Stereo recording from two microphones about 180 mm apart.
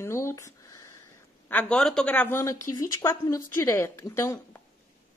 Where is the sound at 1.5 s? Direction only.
5° left (ahead or behind).